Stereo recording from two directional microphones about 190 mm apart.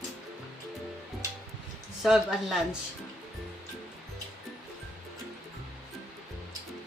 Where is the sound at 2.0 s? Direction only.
5° right (ahead or behind).